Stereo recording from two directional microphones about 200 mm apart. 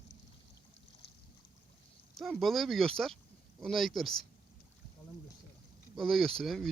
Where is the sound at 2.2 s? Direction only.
Centre (ahead or behind).